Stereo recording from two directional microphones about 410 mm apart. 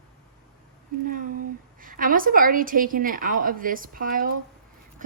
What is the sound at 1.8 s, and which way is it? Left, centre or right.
A woman's voice, centre.